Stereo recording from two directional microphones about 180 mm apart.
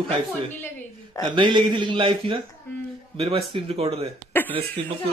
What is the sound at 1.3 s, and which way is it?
A man's voice, 25° right (ahead or behind).